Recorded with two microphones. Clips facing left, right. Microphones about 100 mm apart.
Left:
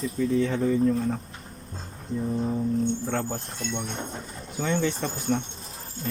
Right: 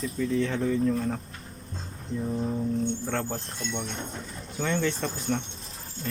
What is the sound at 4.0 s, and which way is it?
Speech, 30° left (ahead or behind).